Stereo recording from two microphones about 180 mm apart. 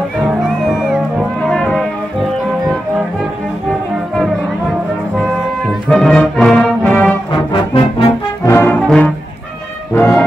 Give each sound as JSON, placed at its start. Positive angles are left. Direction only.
{"t": 0.2, "sound": "music", "side_deg": 0}
{"t": 5.9, "sound": "music", "side_deg": 5}
{"t": 7.3, "sound": "brass instrument", "side_deg": 30}
{"t": 8.5, "sound": "brass instrument", "side_deg": 10}
{"t": 9.9, "sound": "music", "side_deg": 15}